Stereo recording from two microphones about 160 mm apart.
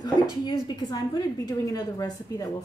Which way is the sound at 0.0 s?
25° left (ahead or behind).